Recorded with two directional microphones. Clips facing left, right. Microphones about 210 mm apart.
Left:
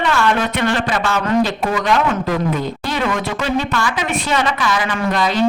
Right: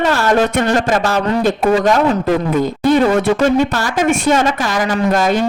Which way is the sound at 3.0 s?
35° right (ahead or behind).